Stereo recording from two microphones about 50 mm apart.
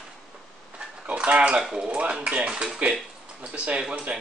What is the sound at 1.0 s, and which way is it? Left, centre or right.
Mantra, right.